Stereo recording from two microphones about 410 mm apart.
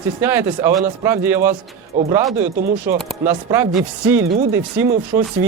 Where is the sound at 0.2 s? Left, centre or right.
Centre.